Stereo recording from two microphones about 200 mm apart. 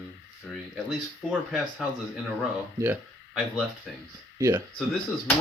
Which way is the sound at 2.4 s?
10° right (ahead or behind).